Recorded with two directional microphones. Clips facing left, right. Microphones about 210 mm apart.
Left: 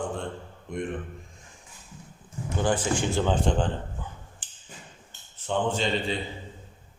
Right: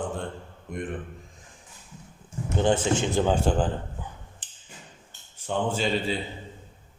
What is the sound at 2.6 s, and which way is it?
Speech, 25° right (ahead or behind).